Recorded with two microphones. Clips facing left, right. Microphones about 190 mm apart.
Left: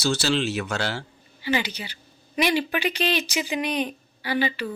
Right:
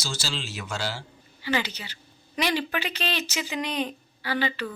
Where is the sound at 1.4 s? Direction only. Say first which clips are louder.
Left 2 dB; 15° left (ahead or behind).